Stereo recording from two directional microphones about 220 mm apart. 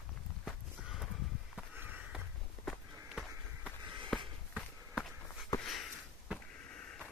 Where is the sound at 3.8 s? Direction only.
20° right (ahead or behind).